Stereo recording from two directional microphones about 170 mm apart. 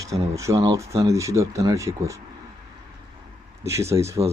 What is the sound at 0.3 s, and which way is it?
Speech, 20° right (ahead or behind).